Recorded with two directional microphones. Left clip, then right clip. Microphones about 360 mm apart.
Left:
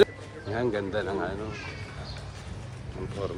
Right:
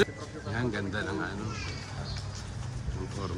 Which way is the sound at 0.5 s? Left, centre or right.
Centre.